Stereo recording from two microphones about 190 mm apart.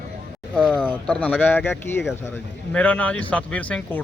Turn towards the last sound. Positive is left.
turn(degrees=5)  # may be behind; listen again after turning